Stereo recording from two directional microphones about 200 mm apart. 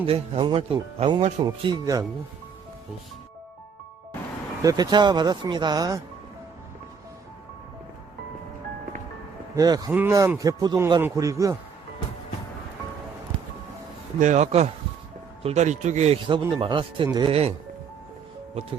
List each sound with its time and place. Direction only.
0.0 s speech: 25° right (ahead or behind)
4.6 s speech: 20° right (ahead or behind)
9.6 s speech: 20° right (ahead or behind)
14.2 s speech: 35° right (ahead or behind)